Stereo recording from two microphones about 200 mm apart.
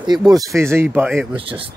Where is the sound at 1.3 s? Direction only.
25° right (ahead or behind).